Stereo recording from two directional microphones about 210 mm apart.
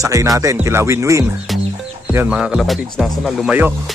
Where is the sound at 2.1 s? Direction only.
10° right (ahead or behind).